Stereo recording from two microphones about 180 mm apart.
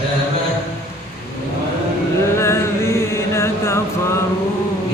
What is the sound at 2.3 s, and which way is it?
Chant, 15° left (ahead or behind).